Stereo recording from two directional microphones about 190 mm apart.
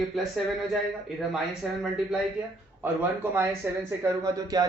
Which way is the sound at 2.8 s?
10° right (ahead or behind).